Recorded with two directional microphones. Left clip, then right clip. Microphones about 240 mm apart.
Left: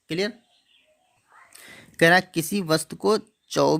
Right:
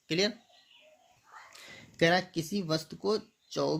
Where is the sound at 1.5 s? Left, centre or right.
Left.